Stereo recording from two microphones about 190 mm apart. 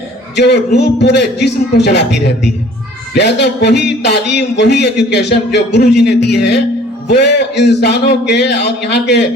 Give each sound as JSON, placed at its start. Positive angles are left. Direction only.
{"t": 0.3, "sound": "speech", "side_deg": 60}
{"t": 3.2, "sound": "speech", "side_deg": 65}